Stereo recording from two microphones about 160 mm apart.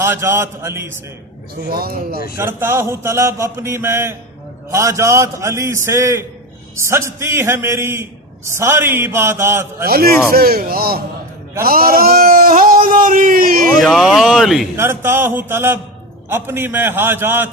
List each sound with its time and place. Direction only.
0.0 s speech: 15° right (ahead or behind)
1.7 s speech: 70° right (ahead or behind)
2.3 s a man's voice: 15° right (ahead or behind)
9.8 s speech: 70° right (ahead or behind)
13.7 s speech: centre (ahead or behind)
14.8 s speech: 15° right (ahead or behind)